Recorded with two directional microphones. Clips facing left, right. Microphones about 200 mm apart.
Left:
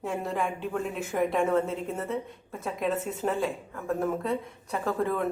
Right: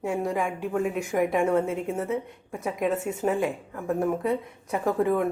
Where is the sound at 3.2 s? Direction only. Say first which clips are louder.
Right 3 dB; 15° right (ahead or behind).